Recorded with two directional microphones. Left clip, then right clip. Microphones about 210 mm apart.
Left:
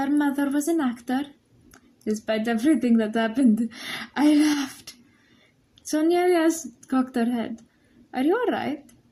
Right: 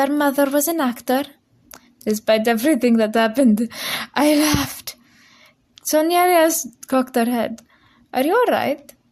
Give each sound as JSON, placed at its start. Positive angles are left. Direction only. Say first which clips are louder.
{"t": 0.0, "sound": "speech", "louder": "right 7 dB", "side_deg": -45}
{"t": 5.7, "sound": "a sound", "louder": "right 6 dB", "side_deg": -45}
{"t": 6.8, "sound": "speech", "louder": "right 6 dB", "side_deg": -45}